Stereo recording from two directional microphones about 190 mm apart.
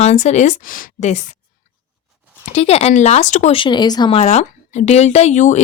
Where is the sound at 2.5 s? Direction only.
35° left (ahead or behind).